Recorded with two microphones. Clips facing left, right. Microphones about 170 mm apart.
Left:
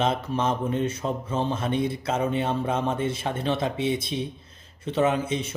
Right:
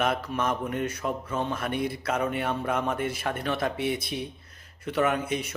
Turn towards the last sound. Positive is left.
turn(degrees=25)  # may be behind; listen again after turning